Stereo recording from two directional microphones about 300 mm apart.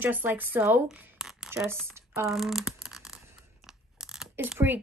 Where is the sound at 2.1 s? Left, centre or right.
Centre.